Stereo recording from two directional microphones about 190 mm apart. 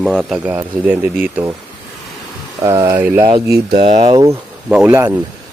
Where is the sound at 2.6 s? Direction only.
15° right (ahead or behind).